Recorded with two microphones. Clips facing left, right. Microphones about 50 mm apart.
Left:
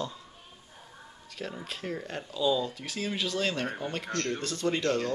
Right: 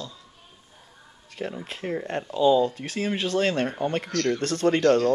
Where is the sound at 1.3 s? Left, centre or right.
Right.